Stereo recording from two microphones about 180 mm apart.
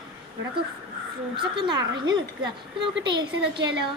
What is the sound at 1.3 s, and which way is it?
Speech, 25° right (ahead or behind).